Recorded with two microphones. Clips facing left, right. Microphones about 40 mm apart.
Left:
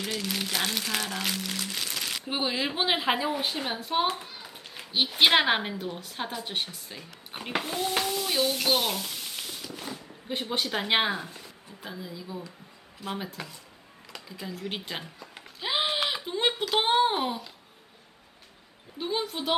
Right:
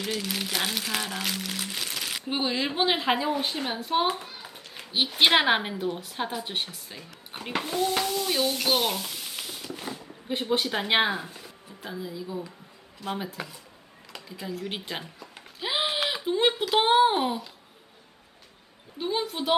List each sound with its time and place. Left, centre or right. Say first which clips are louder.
0.0 s speech: right 1 dB; centre
9.6 s a sound: right 2 dB; centre
10.2 s speech: right 4 dB; centre
18.9 s speech: right 2 dB; centre